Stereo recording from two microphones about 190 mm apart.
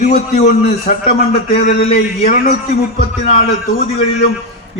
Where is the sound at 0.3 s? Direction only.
40° left (ahead or behind).